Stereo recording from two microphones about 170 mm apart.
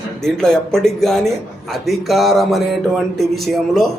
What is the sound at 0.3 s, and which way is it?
Speech, 5° left (ahead or behind).